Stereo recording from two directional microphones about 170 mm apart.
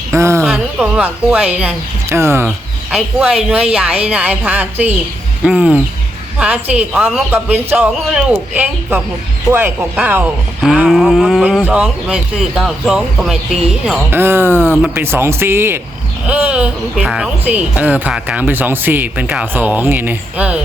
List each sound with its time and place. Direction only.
0.1 s a sound: 15° right (ahead or behind)
0.4 s speech: 5° right (ahead or behind)
2.9 s speech: 5° right (ahead or behind)